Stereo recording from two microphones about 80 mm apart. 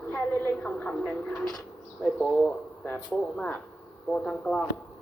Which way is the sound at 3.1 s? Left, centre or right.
Centre.